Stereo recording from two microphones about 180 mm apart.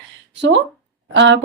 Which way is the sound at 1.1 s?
90° right.